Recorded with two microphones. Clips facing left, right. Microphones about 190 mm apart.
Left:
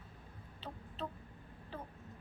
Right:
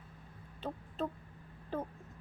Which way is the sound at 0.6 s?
50° right (ahead or behind).